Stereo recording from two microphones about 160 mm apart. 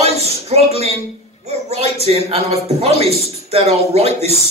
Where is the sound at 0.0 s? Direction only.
40° right (ahead or behind).